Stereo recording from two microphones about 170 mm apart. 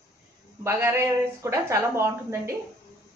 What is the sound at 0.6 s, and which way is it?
Speech, 15° right (ahead or behind).